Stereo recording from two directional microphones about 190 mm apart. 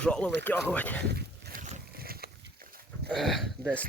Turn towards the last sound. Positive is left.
turn(degrees=5)  # may be behind; listen again after turning